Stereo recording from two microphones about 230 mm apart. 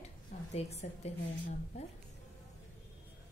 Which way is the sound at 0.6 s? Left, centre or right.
Left.